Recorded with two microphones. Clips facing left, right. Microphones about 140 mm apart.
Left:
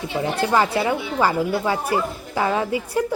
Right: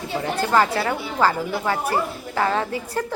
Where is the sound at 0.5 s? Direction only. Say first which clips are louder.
Even; 15° left (ahead or behind).